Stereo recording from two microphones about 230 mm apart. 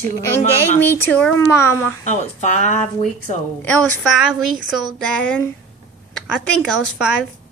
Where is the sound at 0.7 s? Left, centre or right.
Centre.